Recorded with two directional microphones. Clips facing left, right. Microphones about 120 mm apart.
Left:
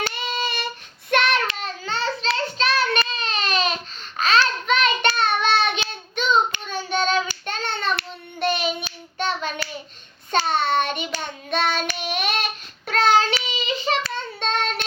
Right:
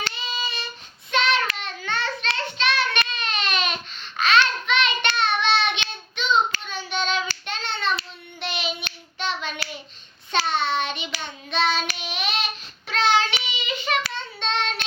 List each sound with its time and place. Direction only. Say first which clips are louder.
0.0 s child singing: left 5 dB; 60° left (ahead or behind)
1.5 s child singing: left 1 dB; 35° left (ahead or behind)
3.1 s baby cry: left 2 dB; 35° left (ahead or behind)
4.2 s child singing: even; 40° left (ahead or behind)
7.4 s hands: left 2 dB; 45° left (ahead or behind)
8.4 s child singing: left 7 dB; 45° left (ahead or behind)
9.1 s hands: left 3 dB; 45° left (ahead or behind)
10.3 s child singing: left 3 dB; 45° left (ahead or behind)
14.1 s child singing: left 3 dB; 45° left (ahead or behind)